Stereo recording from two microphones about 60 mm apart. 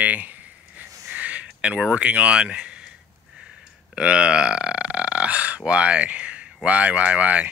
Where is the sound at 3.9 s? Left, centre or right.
Centre.